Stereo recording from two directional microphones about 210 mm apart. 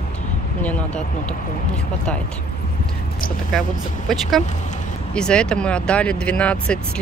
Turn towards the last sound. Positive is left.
turn(degrees=5)  # may be behind; listen again after turning